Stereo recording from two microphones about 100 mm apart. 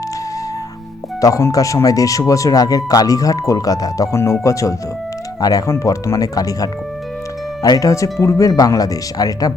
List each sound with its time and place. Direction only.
1.2 s speech: 35° left (ahead or behind)